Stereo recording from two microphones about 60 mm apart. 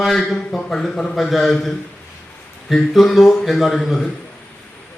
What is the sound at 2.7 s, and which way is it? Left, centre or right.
A man's voice, centre.